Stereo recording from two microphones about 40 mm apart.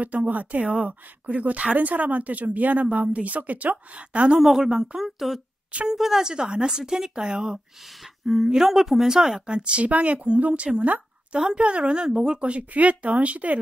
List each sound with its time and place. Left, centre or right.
0.0 s speech: right
4.4 s a woman's voice: centre
6.3 s speech: right
7.8 s a woman's voice: centre
9.6 s a woman's voice: right
12.4 s speech: right